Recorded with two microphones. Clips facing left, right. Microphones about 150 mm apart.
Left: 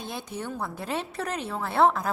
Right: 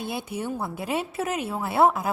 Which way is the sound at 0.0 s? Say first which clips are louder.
Right 4 dB; 10° right (ahead or behind).